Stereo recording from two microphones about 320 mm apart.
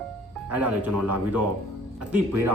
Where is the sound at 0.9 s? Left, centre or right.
Right.